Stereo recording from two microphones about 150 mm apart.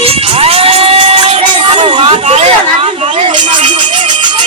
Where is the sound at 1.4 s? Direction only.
35° right (ahead or behind).